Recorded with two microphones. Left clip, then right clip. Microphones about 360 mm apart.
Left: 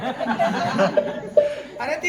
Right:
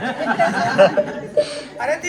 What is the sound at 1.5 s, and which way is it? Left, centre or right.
Speech, centre.